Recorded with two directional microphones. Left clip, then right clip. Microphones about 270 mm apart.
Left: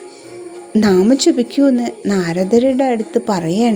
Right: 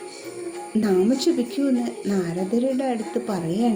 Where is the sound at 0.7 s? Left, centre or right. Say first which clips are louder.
Left 8 dB; left.